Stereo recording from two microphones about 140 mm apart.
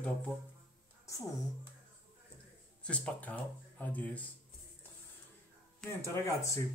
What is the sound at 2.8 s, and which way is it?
Speech, 10° left (ahead or behind).